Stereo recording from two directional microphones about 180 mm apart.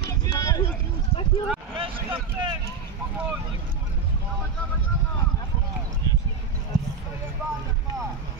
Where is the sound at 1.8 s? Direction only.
30° right (ahead or behind).